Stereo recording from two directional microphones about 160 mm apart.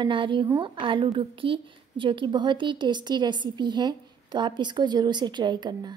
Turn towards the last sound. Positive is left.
turn(degrees=-25)  # may be behind; listen again after turning